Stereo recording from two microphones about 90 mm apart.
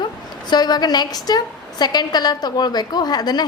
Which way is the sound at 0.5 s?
50° left (ahead or behind).